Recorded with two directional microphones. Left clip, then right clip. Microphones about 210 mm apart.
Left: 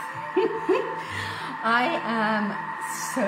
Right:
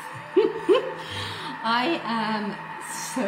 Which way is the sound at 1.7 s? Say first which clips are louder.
Left 1 dB; 15° left (ahead or behind).